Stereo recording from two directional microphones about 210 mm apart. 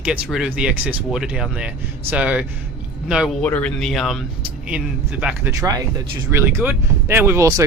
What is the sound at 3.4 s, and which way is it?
Speech, 5° left (ahead or behind).